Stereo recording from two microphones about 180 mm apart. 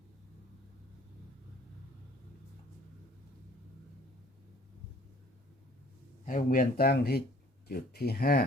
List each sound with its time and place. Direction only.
6.2 s speech: 50° left (ahead or behind)